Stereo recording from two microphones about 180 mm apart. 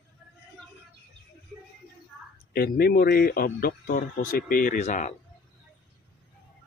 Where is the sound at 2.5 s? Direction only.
60° left (ahead or behind); by 5.1 s 40° left (ahead or behind).